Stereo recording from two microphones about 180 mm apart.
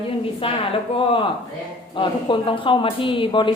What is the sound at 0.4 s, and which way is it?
A woman's voice, 30° left (ahead or behind).